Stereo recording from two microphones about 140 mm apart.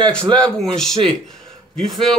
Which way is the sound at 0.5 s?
5° left (ahead or behind).